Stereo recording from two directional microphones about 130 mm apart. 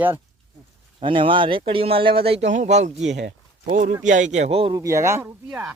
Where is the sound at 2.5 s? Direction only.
65° right (ahead or behind); by 4.8 s 45° right (ahead or behind).